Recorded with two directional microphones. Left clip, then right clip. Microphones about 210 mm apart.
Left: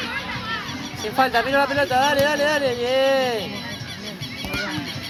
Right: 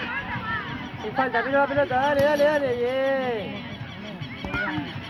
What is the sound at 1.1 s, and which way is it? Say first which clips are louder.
Speech: left 4 dB; 20° left (ahead or behind).